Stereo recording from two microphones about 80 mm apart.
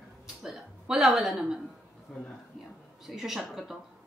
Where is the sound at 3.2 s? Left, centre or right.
Centre.